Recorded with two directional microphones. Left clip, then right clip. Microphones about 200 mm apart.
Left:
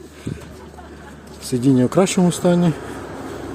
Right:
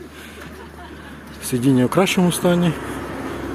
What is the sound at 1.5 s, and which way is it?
Speech, 25° left (ahead or behind).